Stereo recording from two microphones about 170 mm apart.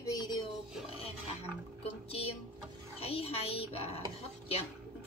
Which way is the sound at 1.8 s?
35° left (ahead or behind).